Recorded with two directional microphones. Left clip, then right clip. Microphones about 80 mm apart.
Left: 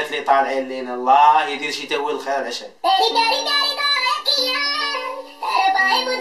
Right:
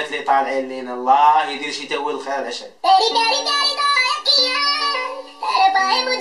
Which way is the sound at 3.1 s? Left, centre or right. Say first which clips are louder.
Even; centre.